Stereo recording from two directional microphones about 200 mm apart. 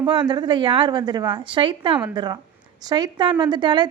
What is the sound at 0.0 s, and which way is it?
A woman's voice, 20° right (ahead or behind).